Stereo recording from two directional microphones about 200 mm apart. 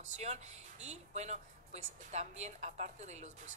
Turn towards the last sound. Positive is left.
turn(degrees=-35)  # may be behind; listen again after turning